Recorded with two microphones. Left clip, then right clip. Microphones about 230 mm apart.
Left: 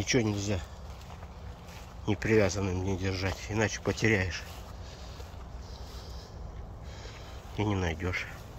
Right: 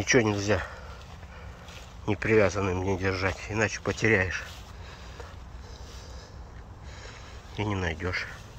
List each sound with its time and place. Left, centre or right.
0.0 s speech: centre
2.0 s speech: centre
7.5 s speech: centre